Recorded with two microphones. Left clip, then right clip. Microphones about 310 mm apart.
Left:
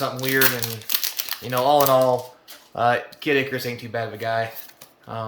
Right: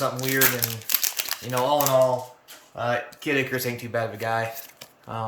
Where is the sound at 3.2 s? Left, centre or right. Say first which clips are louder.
Left 3 dB; centre.